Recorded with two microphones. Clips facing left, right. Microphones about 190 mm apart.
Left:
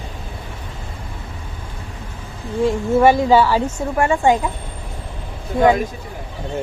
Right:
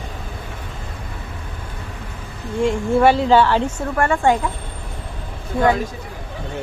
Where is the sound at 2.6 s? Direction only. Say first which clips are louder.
Left 1 dB; 10° right (ahead or behind).